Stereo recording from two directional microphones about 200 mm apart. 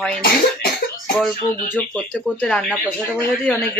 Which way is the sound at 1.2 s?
5° left (ahead or behind).